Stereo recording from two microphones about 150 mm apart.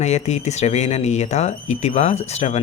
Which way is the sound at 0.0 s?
50° left (ahead or behind).